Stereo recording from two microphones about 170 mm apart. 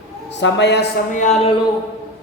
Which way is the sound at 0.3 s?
90° left.